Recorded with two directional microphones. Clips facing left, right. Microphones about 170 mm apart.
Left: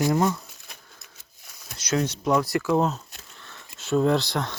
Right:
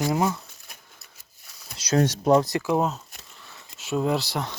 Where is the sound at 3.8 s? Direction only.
5° right (ahead or behind).